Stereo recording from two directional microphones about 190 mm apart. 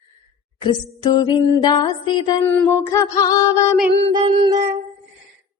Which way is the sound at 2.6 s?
15° left (ahead or behind).